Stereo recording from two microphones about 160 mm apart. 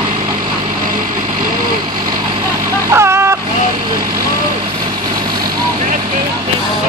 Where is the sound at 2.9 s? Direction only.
15° right (ahead or behind).